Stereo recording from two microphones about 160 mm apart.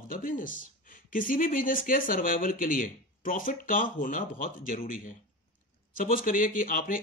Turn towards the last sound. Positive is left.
turn(degrees=60)  # may be behind; listen again after turning